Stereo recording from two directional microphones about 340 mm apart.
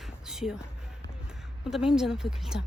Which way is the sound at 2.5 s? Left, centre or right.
Left.